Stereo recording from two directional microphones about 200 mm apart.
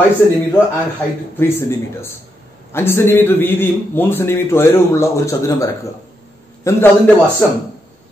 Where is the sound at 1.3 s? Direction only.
10° left (ahead or behind).